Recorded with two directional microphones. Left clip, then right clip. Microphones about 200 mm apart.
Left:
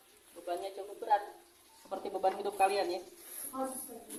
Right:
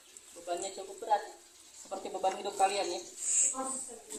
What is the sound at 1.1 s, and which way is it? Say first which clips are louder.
Speech: even; 20° right (ahead or behind).